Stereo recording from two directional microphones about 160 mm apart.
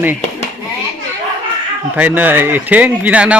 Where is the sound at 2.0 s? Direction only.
10° right (ahead or behind).